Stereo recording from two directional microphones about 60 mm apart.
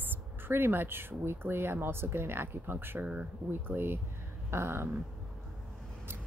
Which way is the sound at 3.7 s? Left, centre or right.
Right.